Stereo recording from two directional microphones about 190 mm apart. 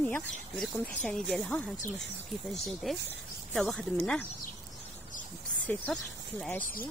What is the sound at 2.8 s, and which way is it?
Speech, centre (ahead or behind).